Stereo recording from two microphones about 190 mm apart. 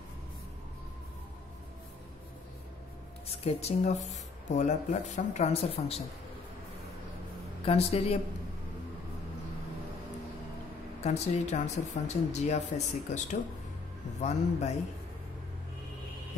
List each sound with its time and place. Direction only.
3.3 s speech: 35° left (ahead or behind)
7.6 s speech: 30° left (ahead or behind)
11.1 s speech: 35° left (ahead or behind)